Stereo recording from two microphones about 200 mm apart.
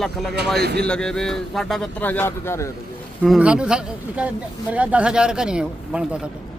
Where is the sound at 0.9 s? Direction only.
5° left (ahead or behind).